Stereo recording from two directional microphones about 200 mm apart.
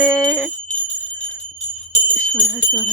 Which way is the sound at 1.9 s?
40° left (ahead or behind).